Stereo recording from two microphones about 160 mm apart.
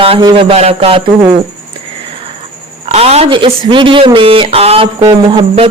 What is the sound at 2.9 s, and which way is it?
Speech, 40° right (ahead or behind).